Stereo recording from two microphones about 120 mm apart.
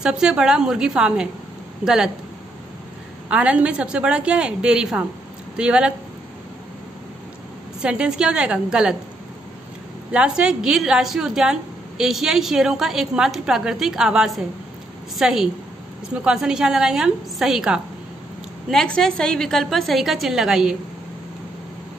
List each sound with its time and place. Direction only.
0.0 s a woman's voice: 5° right (ahead or behind)
3.3 s a woman's voice: 10° right (ahead or behind)
7.8 s a woman's voice: 5° right (ahead or behind)
10.1 s a woman's voice: 10° right (ahead or behind)
18.7 s a woman's voice: 5° left (ahead or behind)